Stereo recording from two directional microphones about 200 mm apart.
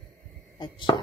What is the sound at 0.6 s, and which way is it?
Chopping, 25° left (ahead or behind).